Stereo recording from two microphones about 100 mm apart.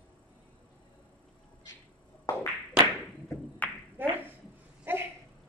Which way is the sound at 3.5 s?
15° left (ahead or behind).